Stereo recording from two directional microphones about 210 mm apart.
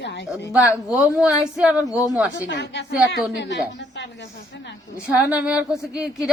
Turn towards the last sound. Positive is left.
turn(degrees=-5)  # may be behind; listen again after turning